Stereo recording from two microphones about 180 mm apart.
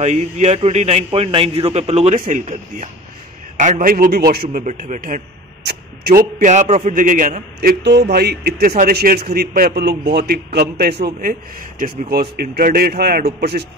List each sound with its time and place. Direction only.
0.0 s a man's voice: 40° right (ahead or behind); by 4.5 s 60° right (ahead or behind)
4.5 s a man's voice: 45° right (ahead or behind)
5.6 s a sound: 65° right (ahead or behind)
6.4 s a man's voice: 40° right (ahead or behind)
7.8 s a man's voice: 70° right (ahead or behind)
11.8 s a man's voice: 55° right (ahead or behind)